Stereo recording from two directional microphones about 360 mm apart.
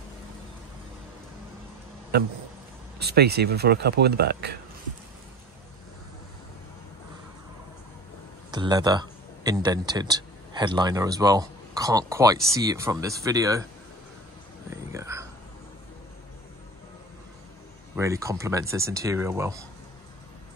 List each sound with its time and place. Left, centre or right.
2.1 s speech: right
8.5 s speech: centre
14.9 s a sound: centre
17.9 s speech: centre